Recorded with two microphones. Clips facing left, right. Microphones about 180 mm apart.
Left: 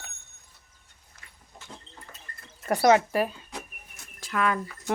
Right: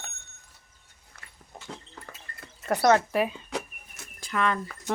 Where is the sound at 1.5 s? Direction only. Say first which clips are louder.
Right 5 dB; 60° right (ahead or behind).